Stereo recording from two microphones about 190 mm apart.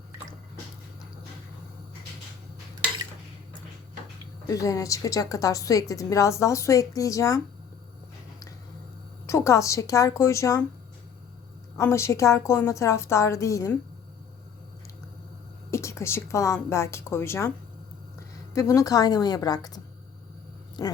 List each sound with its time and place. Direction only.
4.4 s a woman's voice: 15° left (ahead or behind)
9.2 s a woman's voice: 15° left (ahead or behind)
11.8 s a woman's voice: 15° left (ahead or behind)
15.7 s a woman's voice: 15° left (ahead or behind)